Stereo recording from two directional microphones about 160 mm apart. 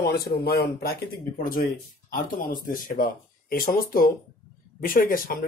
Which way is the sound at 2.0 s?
60° left (ahead or behind).